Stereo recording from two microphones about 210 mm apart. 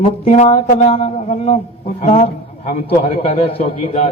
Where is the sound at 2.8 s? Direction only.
25° left (ahead or behind).